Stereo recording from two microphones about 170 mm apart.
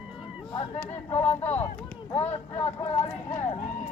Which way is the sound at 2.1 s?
40° left (ahead or behind).